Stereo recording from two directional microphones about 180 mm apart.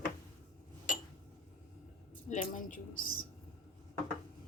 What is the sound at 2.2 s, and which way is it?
A woman's voice, 45° left (ahead or behind).